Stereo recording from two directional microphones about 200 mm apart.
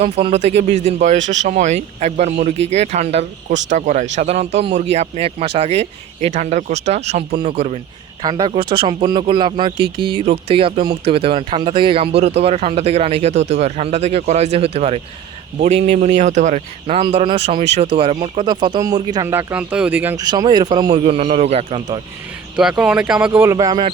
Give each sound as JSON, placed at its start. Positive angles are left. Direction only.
{"t": 0.0, "sound": "speech", "side_deg": -30}
{"t": 1.2, "sound": "speech", "side_deg": -65}
{"t": 1.5, "sound": "speech", "side_deg": -35}
{"t": 20.2, "sound": "speech", "side_deg": -20}
{"t": 22.5, "sound": "speech", "side_deg": -5}